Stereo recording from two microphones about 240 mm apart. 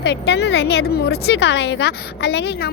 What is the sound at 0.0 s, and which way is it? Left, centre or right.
A woman's voice, left.